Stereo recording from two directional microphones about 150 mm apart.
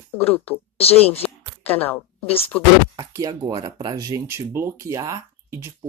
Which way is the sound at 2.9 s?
25° right (ahead or behind).